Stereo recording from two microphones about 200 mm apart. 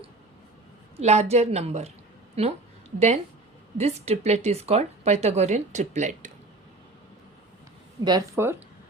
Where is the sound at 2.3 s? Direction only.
30° right (ahead or behind).